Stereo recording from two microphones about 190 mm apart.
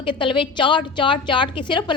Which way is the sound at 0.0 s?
25° left (ahead or behind).